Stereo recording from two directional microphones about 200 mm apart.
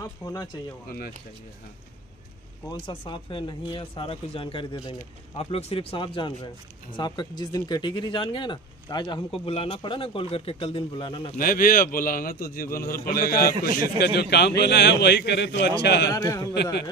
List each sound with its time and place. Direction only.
0.0 s speech: 15° left (ahead or behind)
0.8 s a man's voice: 50° left (ahead or behind)
2.7 s speech: 25° left (ahead or behind)
11.3 s a man's voice: 45° left (ahead or behind)
16.1 s a man's voice: 15° left (ahead or behind)